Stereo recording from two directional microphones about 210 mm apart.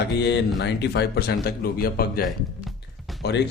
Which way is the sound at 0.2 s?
55° left (ahead or behind).